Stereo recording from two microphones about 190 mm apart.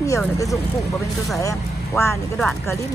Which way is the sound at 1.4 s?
15° left (ahead or behind).